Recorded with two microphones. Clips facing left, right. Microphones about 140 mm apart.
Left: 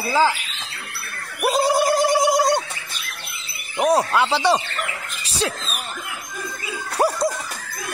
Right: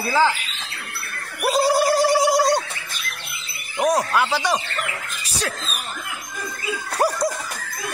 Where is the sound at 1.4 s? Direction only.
20° left (ahead or behind).